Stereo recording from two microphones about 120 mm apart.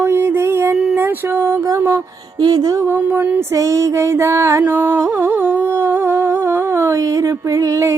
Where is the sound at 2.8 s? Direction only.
20° right (ahead or behind).